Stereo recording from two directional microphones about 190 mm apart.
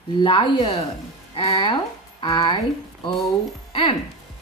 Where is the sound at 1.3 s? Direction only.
30° left (ahead or behind).